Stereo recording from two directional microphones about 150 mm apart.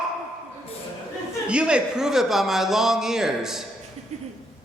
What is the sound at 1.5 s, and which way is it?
A man's voice, 5° right (ahead or behind).